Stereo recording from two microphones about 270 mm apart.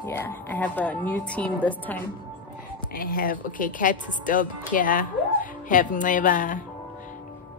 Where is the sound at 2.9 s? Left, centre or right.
Left.